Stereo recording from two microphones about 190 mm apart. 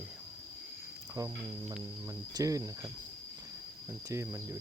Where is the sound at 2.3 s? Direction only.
15° right (ahead or behind).